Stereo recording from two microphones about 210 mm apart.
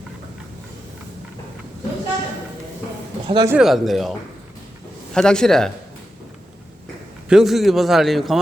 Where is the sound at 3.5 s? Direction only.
Centre (ahead or behind).